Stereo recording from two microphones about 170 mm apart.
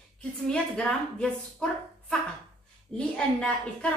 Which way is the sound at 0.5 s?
5° left (ahead or behind).